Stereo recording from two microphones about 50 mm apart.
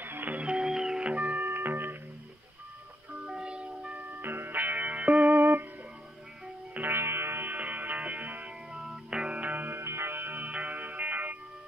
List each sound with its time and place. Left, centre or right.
0.0 s music: right
0.6 s music: centre
1.1 s music: right
1.4 s music: right
3.3 s music: centre
4.2 s music: right
5.3 s music: right
6.7 s music: right
7.5 s music: right
8.7 s music: centre
9.1 s music: centre
9.6 s music: right
10.4 s music: right